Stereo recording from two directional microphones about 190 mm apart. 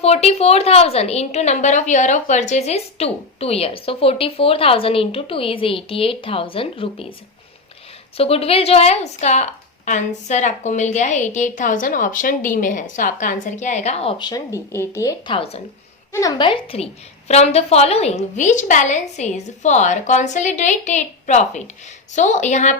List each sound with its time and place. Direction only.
0.0 s a woman's voice: 35° left (ahead or behind)
8.1 s a woman's voice: 30° left (ahead or behind)